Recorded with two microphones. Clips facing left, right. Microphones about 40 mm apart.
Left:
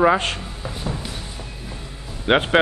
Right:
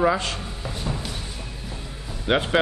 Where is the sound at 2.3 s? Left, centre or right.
Left.